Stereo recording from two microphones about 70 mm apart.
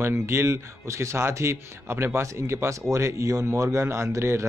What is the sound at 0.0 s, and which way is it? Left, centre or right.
Speech, right.